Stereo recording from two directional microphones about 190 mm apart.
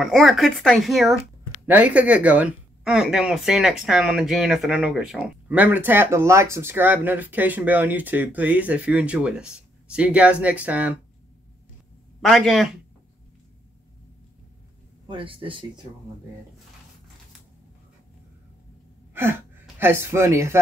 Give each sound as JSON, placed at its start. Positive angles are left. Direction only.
{"t": 0.0, "sound": "speech", "side_deg": 0}
{"t": 12.3, "sound": "speech", "side_deg": 0}
{"t": 15.0, "sound": "speech", "side_deg": -25}
{"t": 19.6, "sound": "speech", "side_deg": -10}